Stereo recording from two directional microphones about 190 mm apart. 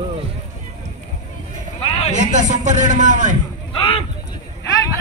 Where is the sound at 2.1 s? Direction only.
40° right (ahead or behind).